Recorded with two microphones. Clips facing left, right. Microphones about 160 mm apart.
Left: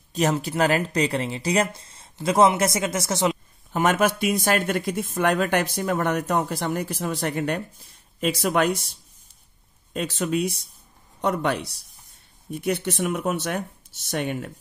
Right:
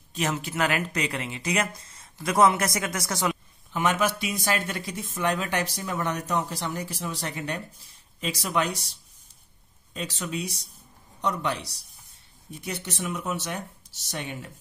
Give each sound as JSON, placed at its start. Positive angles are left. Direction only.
{"t": 0.1, "sound": "speech", "side_deg": 40}
{"t": 3.7, "sound": "speech", "side_deg": 50}
{"t": 9.9, "sound": "speech", "side_deg": 55}